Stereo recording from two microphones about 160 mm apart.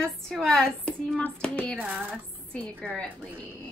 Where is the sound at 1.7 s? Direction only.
10° right (ahead or behind).